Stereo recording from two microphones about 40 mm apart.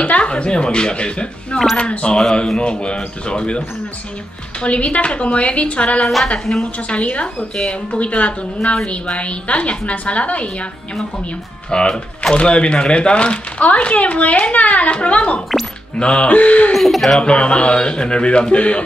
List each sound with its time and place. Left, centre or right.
0.0 s a woman's voice: left
6.2 s a woman's voice: centre
11.7 s a woman's voice: left
16.7 s speech: centre
17.2 s speech: left